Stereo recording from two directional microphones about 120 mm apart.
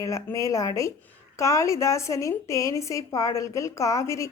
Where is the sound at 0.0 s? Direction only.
25° left (ahead or behind).